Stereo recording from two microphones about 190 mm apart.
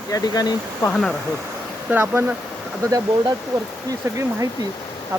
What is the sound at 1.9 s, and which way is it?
Speech, 10° right (ahead or behind).